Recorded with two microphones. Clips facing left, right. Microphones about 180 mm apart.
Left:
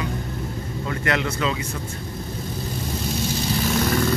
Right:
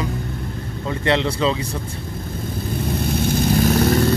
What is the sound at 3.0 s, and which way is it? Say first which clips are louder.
Vehicle: right 6 dB; 55° right (ahead or behind).